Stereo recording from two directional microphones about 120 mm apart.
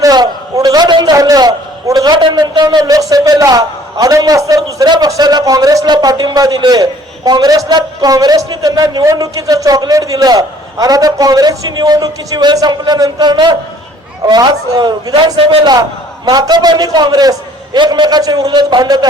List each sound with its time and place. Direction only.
0.0 s a sound: 30° right (ahead or behind)
1.1 s a man's voice: 30° right (ahead or behind)
15.4 s a man's voice: 45° right (ahead or behind)